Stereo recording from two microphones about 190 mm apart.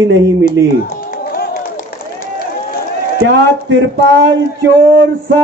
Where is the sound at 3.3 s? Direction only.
70° right (ahead or behind).